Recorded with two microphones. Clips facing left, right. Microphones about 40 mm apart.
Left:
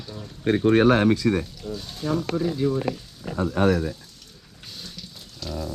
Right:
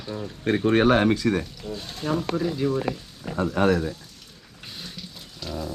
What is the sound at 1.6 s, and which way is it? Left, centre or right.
Dog, right.